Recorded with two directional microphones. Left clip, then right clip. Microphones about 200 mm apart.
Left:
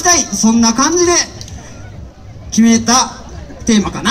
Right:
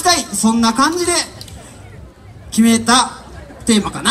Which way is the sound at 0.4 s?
25° left (ahead or behind).